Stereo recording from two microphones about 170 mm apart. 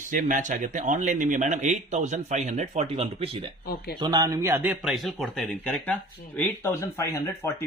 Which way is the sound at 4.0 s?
25° right (ahead or behind).